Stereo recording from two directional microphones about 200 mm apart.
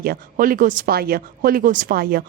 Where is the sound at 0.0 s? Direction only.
45° right (ahead or behind).